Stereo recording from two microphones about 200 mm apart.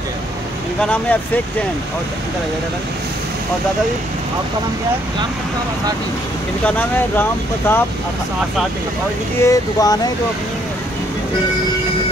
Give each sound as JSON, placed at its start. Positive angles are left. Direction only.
{"t": 0.7, "sound": "speech", "side_deg": 5}
{"t": 6.6, "sound": "speech", "side_deg": 5}
{"t": 9.4, "sound": "speech", "side_deg": 15}